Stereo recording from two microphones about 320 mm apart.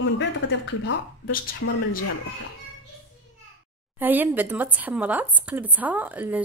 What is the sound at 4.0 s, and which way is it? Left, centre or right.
Speech, centre.